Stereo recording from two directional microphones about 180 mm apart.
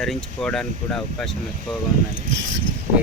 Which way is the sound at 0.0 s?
Centre (ahead or behind).